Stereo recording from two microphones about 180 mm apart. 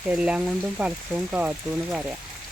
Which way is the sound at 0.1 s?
5° right (ahead or behind).